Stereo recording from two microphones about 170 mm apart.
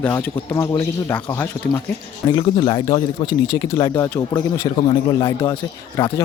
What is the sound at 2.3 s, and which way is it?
Speech, 25° left (ahead or behind).